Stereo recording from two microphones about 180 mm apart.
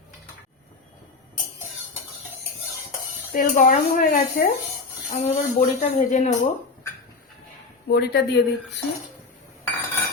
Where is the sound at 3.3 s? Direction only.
45° left (ahead or behind).